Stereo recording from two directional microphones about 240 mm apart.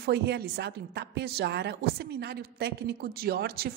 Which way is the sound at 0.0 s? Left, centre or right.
Right.